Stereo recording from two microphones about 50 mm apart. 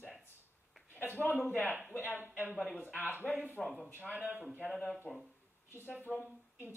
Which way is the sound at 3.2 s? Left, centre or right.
Centre.